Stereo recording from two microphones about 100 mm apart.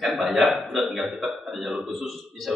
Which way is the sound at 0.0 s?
Centre (ahead or behind).